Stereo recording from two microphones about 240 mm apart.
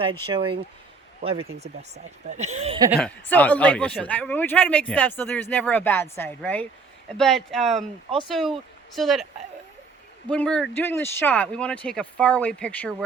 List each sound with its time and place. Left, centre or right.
0.0 s speech: right
2.7 s a woman's voice: centre
3.0 s speech: centre
10.2 s speech: centre